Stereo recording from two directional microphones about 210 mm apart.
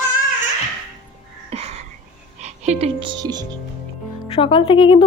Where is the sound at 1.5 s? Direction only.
30° right (ahead or behind).